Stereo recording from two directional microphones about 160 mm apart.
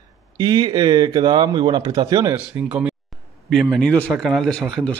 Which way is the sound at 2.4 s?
5° right (ahead or behind).